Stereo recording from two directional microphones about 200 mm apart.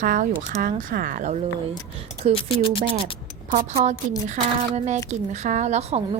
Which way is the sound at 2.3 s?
25° left (ahead or behind).